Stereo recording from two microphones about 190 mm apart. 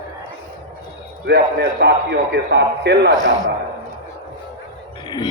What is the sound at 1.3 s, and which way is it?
A man's voice, 60° right (ahead or behind).